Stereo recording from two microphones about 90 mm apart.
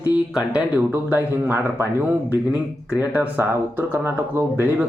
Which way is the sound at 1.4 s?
25° right (ahead or behind).